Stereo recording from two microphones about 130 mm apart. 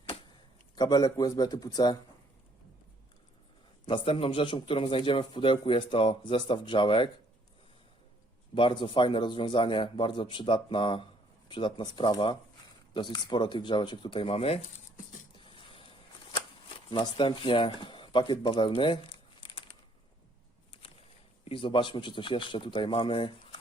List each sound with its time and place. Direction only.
0.8 s speech: 30° left (ahead or behind)
3.8 s a man's voice: 40° left (ahead or behind)
8.5 s a man's voice: 40° left (ahead or behind); by 15.3 s 75° left (ahead or behind)
15.4 s a sound: 40° left (ahead or behind)
16.9 s a man's voice: 40° left (ahead or behind)
21.4 s a man's voice: 45° left (ahead or behind)